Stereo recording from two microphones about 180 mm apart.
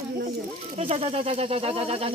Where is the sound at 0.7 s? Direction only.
35° right (ahead or behind).